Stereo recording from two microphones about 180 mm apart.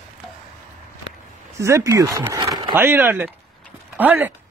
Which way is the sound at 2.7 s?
10° right (ahead or behind).